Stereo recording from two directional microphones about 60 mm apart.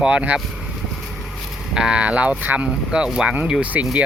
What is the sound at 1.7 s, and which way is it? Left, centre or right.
Speech, centre.